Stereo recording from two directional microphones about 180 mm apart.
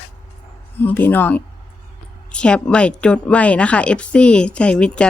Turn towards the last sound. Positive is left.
turn(degrees=5)  # may be behind; listen again after turning